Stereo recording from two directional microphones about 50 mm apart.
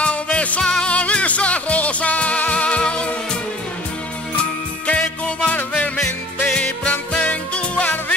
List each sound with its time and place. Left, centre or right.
0.0 s music: left
4.8 s music: left
6.9 s music: left